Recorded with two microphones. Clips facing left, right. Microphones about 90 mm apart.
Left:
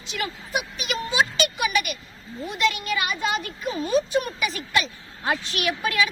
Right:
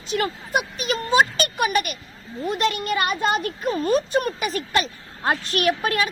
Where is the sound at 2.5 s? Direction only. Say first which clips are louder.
Right 2 dB; 45° right (ahead or behind).